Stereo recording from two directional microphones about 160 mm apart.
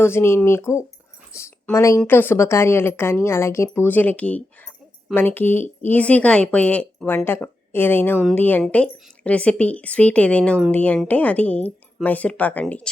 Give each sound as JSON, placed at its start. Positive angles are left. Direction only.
{"t": 0.0, "sound": "a woman's voice", "side_deg": 15}